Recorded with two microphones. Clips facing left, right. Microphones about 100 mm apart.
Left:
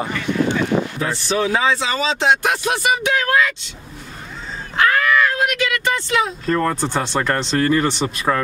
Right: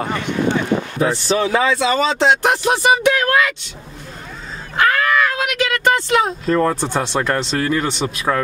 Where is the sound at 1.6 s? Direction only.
55° right (ahead or behind).